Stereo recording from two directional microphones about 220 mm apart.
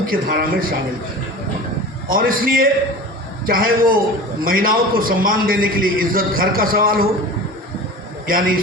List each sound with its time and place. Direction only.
0.1 s a man's voice: 40° right (ahead or behind)
2.0 s a man's voice: 40° right (ahead or behind)
8.3 s a man's voice: 40° right (ahead or behind)